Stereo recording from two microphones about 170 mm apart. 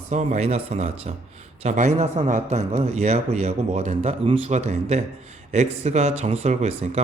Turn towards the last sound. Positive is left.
turn(degrees=-40)  # may be behind; listen again after turning